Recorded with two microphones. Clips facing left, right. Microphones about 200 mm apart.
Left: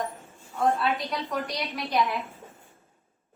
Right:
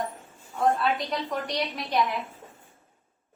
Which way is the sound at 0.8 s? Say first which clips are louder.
Right 1 dB; centre (ahead or behind).